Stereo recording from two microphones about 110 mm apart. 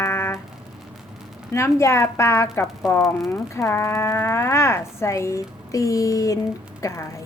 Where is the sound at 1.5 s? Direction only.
25° left (ahead or behind).